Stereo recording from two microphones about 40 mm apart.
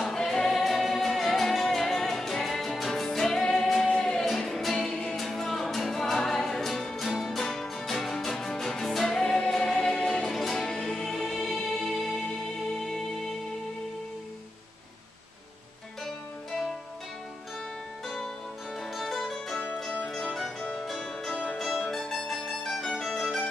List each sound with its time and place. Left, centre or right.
0.0 s music: centre
4.2 s music: centre
9.2 s music: left
9.5 s music: centre
10.2 s music: centre
18.0 s music: centre
21.5 s mandolin: centre
22.7 s music: centre